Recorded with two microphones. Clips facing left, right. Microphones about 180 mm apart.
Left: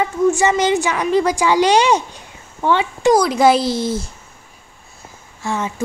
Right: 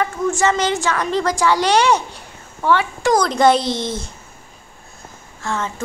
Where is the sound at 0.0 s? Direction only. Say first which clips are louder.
Left 3 dB; 15° left (ahead or behind).